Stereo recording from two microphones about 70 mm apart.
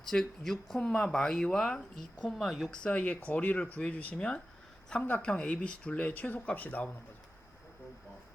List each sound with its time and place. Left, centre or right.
0.1 s speech: centre; by 6.8 s left